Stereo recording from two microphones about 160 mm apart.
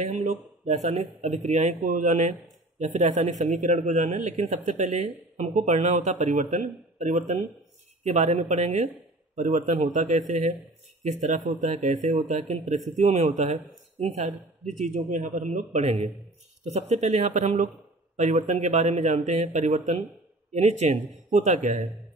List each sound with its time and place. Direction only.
0.0 s a man's voice: 45° right (ahead or behind)